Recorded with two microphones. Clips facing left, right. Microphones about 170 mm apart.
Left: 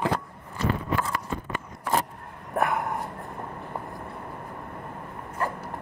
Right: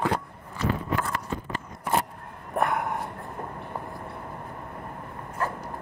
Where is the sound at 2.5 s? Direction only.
Centre (ahead or behind).